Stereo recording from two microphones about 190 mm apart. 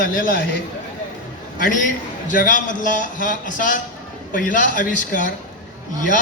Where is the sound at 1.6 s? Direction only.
45° left (ahead or behind).